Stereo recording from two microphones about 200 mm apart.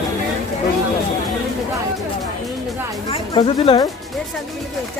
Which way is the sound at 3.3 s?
30° left (ahead or behind).